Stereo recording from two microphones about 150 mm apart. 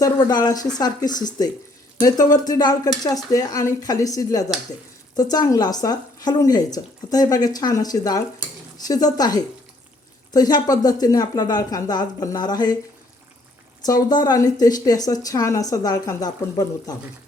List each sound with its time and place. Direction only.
0.0 s speech: 25° left (ahead or behind)
13.8 s speech: 25° left (ahead or behind)